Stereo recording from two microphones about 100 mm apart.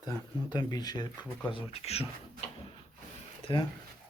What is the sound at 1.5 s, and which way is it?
Speech, 80° left.